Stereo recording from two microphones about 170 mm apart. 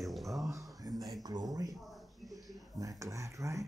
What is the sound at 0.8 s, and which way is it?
Speech, 20° right (ahead or behind).